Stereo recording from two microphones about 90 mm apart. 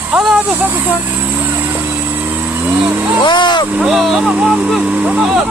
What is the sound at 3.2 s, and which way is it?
Speech, 60° left (ahead or behind).